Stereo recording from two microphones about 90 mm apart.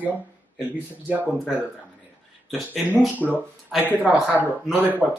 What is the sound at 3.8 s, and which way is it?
Speech, 15° right (ahead or behind).